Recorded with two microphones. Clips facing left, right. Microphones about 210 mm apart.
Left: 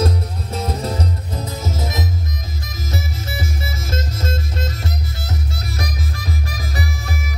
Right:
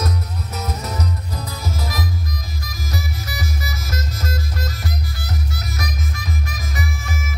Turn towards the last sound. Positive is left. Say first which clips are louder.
# left 2 dB
turn(degrees=35)  # may be behind; listen again after turning